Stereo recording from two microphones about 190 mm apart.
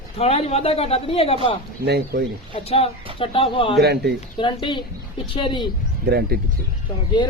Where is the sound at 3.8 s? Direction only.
60° right (ahead or behind).